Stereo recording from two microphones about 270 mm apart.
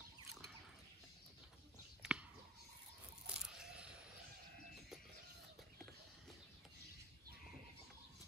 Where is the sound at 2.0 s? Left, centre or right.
Centre.